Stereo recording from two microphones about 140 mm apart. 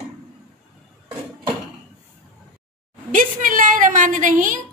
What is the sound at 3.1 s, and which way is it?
A woman's voice, 70° right (ahead or behind).